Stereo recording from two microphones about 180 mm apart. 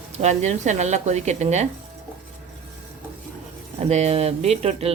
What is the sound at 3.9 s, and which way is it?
Speech, 35° right (ahead or behind).